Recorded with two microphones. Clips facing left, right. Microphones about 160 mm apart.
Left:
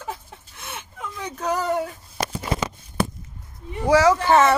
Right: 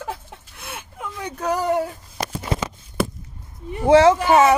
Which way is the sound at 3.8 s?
25° right (ahead or behind).